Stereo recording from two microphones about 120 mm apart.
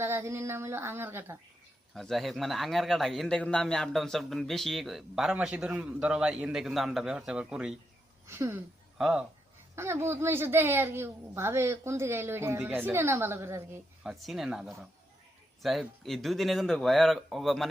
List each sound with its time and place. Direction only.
0.0 s a woman's voice: 20° right (ahead or behind)
1.9 s a man's voice: centre (ahead or behind)
8.3 s a woman's voice: 20° right (ahead or behind)
9.0 s speech: 5° right (ahead or behind)
9.7 s a woman's voice: 20° right (ahead or behind)
14.0 s a man's voice: 5° right (ahead or behind)